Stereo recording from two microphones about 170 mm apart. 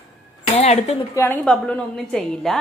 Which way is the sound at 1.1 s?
15° left (ahead or behind).